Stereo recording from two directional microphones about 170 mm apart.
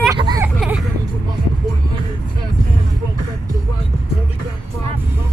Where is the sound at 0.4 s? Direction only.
5° right (ahead or behind).